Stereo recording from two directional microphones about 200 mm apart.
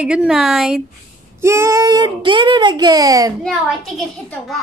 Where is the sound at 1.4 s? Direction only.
15° right (ahead or behind).